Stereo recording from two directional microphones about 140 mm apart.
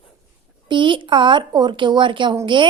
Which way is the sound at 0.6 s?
35° right (ahead or behind).